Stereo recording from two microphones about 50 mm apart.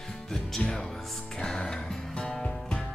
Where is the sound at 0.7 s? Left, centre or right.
Centre.